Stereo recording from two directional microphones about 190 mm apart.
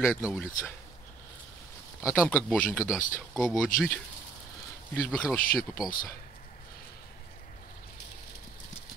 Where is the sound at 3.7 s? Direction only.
45° left (ahead or behind).